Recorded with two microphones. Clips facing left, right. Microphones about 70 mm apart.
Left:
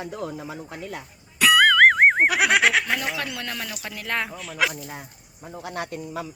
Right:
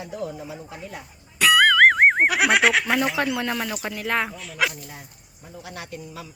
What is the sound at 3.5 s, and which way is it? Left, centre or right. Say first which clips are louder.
Speech: right 6 dB; centre.